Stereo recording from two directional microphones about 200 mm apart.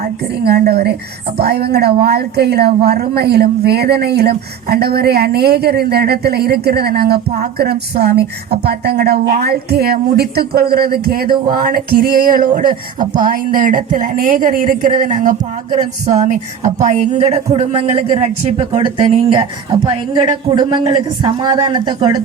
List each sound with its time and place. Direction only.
0.4 s a man's voice: 50° right (ahead or behind); by 22.2 s 20° right (ahead or behind)